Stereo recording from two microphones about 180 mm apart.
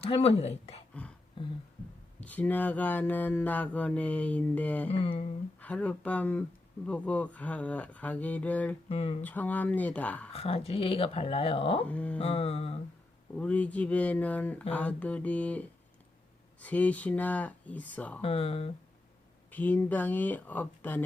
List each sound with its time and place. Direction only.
0.0 s speech: 35° left (ahead or behind)
1.4 s beatboxing: 25° left (ahead or behind)
2.2 s mantra: 10° left (ahead or behind)
4.9 s speech: 30° left (ahead or behind)
5.5 s mantra: 10° left (ahead or behind)
8.9 s speech: 35° left (ahead or behind)
9.2 s mantra: 10° left (ahead or behind)
10.3 s speech: 35° left (ahead or behind)
11.9 s mantra: 5° left (ahead or behind)
12.2 s speech: 35° left (ahead or behind)
13.3 s mantra: 5° left (ahead or behind)
18.2 s speech: 35° left (ahead or behind)
19.5 s mantra: 10° left (ahead or behind)